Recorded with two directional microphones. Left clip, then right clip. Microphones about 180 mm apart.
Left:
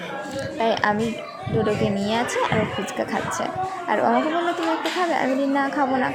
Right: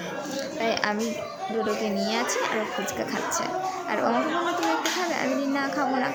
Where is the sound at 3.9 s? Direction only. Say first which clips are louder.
Left 5 dB; 15° left (ahead or behind).